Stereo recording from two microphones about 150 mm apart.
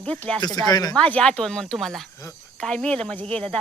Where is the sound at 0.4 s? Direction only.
25° left (ahead or behind).